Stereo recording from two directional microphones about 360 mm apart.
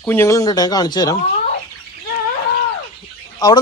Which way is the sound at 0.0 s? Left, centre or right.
Centre.